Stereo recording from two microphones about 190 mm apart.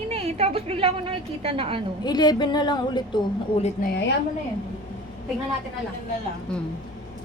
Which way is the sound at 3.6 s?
45° left (ahead or behind).